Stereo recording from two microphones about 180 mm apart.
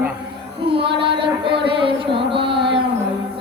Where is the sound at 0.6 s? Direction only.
30° right (ahead or behind).